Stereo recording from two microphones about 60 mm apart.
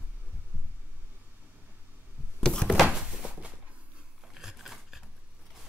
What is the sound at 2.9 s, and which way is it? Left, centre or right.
Thunk, centre.